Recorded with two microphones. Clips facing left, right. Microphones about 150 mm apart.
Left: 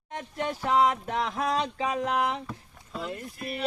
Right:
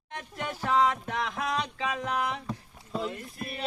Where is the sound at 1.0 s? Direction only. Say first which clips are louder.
Left 3 dB; 35° left (ahead or behind).